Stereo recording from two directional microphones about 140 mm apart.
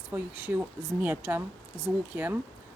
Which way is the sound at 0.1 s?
15° right (ahead or behind).